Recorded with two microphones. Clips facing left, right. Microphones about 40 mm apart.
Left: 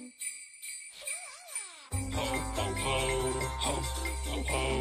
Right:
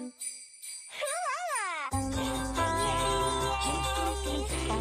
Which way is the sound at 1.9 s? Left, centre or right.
Left.